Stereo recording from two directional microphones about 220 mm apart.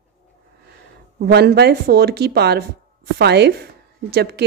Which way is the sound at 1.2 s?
45° right (ahead or behind).